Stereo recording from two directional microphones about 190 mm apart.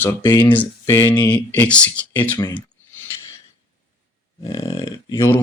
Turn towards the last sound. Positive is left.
turn(degrees=15)  # may be behind; listen again after turning